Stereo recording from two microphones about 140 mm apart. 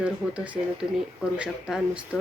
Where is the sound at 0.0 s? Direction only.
10° right (ahead or behind).